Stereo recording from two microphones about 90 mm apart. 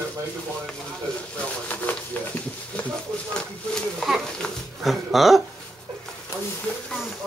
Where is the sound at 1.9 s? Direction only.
20° left (ahead or behind).